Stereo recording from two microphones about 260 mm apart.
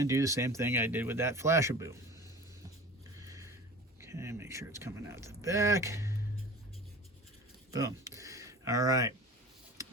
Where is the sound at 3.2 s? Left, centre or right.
Centre.